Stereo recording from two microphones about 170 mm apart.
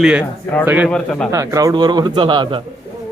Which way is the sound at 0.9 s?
5° left (ahead or behind).